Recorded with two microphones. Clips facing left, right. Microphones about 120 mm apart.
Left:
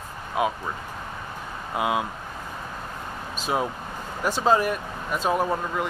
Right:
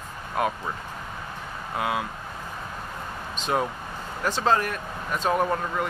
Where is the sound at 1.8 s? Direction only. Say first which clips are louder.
Left 3 dB; 20° left (ahead or behind).